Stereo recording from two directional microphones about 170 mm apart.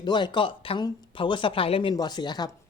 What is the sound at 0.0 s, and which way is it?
A woman's voice, 25° left (ahead or behind).